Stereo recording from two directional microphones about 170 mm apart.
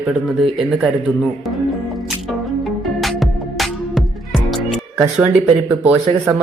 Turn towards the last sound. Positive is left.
turn(degrees=-10)  # may be behind; listen again after turning